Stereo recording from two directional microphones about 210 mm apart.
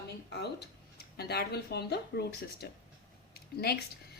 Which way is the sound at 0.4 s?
50° left (ahead or behind).